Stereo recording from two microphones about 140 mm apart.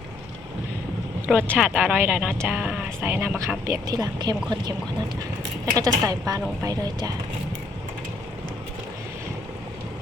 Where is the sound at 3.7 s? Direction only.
25° right (ahead or behind).